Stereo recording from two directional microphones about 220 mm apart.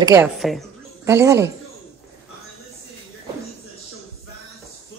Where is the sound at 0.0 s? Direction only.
15° right (ahead or behind).